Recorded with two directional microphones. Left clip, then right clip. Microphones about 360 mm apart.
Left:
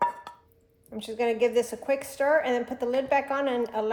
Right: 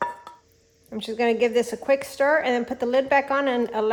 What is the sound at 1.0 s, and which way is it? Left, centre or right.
A woman's voice, right.